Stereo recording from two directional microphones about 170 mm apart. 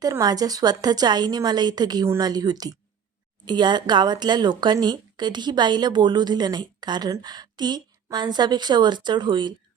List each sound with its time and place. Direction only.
0.0 s speech: 20° right (ahead or behind)